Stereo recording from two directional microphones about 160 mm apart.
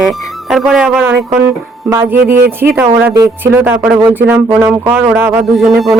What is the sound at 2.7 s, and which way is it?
Speech, 10° right (ahead or behind).